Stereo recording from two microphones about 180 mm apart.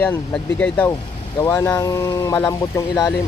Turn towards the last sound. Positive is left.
turn(degrees=20)  # may be behind; listen again after turning